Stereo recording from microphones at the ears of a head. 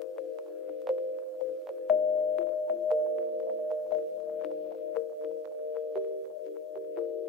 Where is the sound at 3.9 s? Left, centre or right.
Left.